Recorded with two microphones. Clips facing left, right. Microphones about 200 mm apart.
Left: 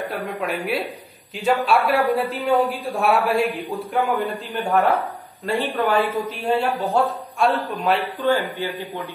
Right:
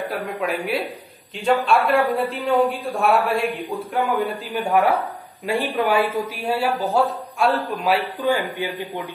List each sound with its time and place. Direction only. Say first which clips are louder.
0.1 s speech: right 1 dB; centre (ahead or behind)
8.0 s speech: left 1 dB; 15° right (ahead or behind)